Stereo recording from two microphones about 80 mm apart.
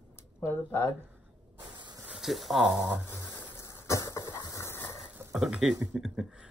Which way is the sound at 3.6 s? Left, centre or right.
Left.